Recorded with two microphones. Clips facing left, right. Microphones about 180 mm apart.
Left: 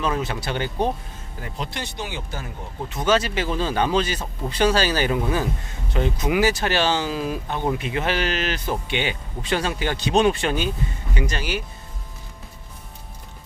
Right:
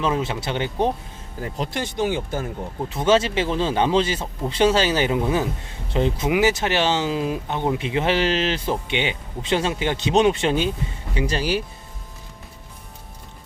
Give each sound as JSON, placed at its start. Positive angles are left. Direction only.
{"t": 0.0, "sound": "speech", "side_deg": -25}
{"t": 1.4, "sound": "speech", "side_deg": -40}
{"t": 2.9, "sound": "speech", "side_deg": -25}